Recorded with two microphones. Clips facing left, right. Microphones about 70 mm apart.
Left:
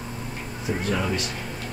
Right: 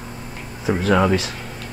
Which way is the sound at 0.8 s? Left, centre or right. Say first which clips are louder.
Right 10 dB; right.